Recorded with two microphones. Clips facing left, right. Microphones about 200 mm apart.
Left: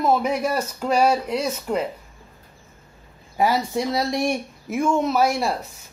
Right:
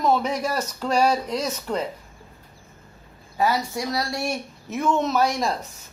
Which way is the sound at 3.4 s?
20° left (ahead or behind).